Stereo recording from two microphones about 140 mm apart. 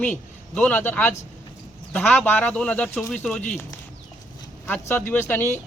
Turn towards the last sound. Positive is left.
turn(degrees=15)  # may be behind; listen again after turning